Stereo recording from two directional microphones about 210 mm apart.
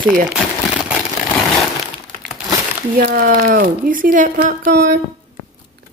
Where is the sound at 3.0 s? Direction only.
45° right (ahead or behind).